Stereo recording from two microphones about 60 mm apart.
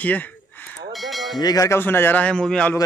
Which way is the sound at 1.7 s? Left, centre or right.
Left.